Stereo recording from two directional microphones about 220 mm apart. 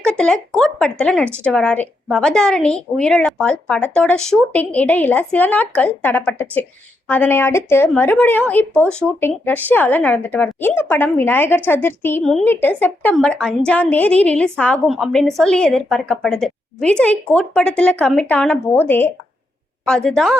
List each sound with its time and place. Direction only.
0.0 s a woman's voice: 5° left (ahead or behind)